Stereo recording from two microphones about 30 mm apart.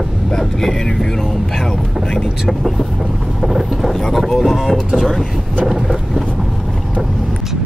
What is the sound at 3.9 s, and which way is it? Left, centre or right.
Speech, centre.